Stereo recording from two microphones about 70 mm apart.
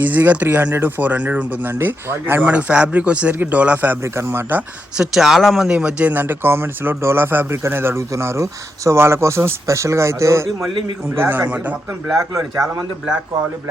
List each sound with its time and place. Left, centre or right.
0.0 s speech: right
4.0 s a man's voice: right
4.9 s speech: centre
5.6 s a man's voice: centre; by 10.5 s right
11.1 s speech: right